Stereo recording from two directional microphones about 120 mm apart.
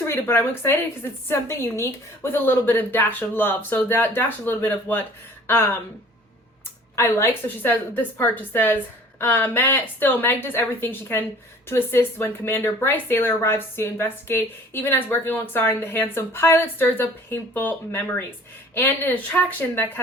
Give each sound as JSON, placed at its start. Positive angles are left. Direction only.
{"t": 0.0, "sound": "speech", "side_deg": 20}
{"t": 6.9, "sound": "speech", "side_deg": 20}